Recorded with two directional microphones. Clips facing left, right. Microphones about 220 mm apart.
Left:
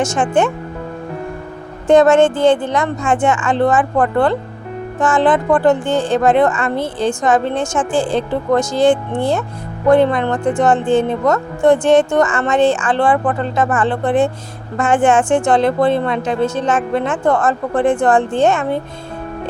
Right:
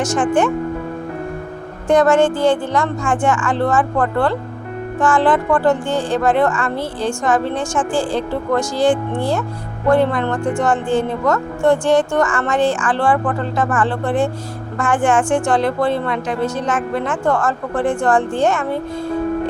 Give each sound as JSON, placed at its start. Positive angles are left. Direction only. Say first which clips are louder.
{"t": 0.0, "sound": "a woman's voice", "louder": "left 1 dB", "side_deg": 25}
{"t": 1.9, "sound": "a woman's voice", "louder": "left 3 dB", "side_deg": 25}